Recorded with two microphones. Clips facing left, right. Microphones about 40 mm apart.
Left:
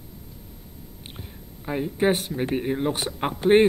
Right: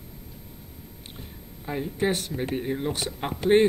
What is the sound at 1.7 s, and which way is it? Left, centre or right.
Speech, centre.